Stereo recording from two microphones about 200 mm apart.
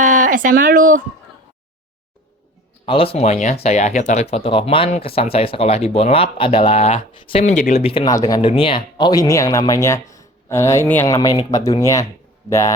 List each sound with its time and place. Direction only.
0.0 s speech: 40° right (ahead or behind)
2.8 s speech: 25° left (ahead or behind)